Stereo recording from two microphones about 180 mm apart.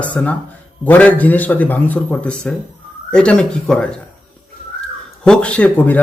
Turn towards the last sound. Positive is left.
turn(degrees=10)  # may be behind; listen again after turning